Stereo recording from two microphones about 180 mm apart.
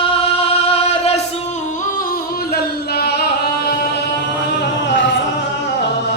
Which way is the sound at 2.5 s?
60° left (ahead or behind).